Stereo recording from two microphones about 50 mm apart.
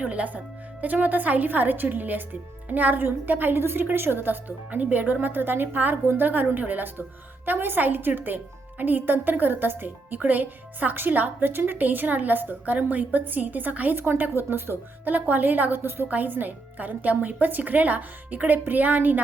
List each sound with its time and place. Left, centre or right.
0.0 s speech: right
13.9 s speech: right
15.1 s speech: right
16.0 s speech: right